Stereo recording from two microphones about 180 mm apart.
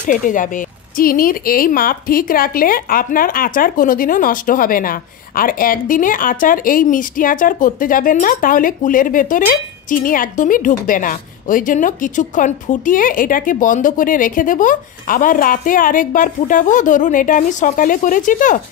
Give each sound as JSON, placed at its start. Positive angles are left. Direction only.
{"t": 0.0, "sound": "speech", "side_deg": 45}